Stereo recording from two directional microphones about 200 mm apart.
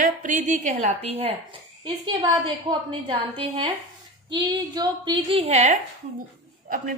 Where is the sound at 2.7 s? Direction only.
25° right (ahead or behind).